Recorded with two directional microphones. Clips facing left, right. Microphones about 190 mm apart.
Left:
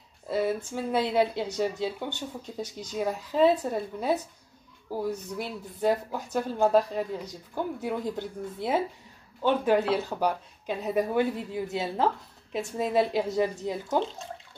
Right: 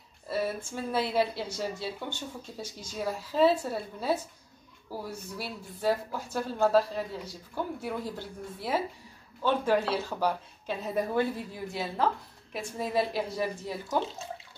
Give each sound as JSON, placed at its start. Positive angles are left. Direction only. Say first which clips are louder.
{"t": 0.3, "sound": "speech", "louder": "left 4 dB", "side_deg": 20}
{"t": 5.4, "sound": "speech", "louder": "left 3 dB", "side_deg": 20}